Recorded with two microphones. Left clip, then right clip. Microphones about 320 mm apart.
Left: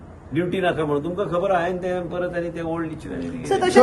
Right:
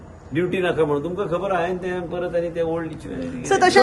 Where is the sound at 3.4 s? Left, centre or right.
Right.